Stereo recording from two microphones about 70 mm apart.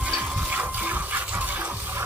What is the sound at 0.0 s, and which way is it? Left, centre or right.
Water, right.